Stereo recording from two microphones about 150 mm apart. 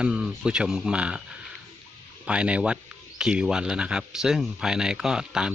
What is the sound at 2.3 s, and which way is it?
Speech, 5° right (ahead or behind).